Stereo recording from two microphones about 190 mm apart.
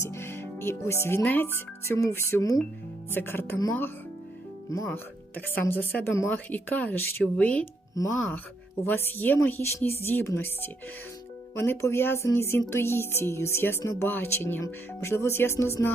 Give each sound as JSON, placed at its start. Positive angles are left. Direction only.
{"t": 0.0, "sound": "speech", "side_deg": 15}
{"t": 8.0, "sound": "speech", "side_deg": 20}